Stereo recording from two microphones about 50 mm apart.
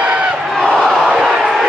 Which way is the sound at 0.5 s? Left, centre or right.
Centre.